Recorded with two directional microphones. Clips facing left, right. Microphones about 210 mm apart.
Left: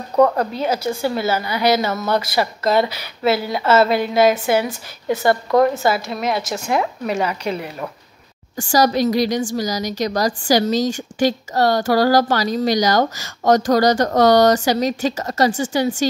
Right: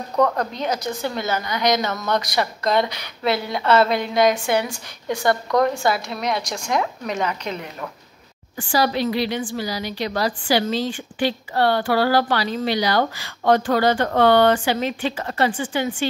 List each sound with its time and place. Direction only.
0.2 s a woman's voice: 5° left (ahead or behind)
8.5 s a woman's voice: 45° left (ahead or behind)